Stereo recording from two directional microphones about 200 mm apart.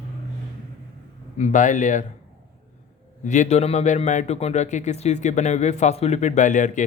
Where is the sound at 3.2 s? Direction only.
35° left (ahead or behind).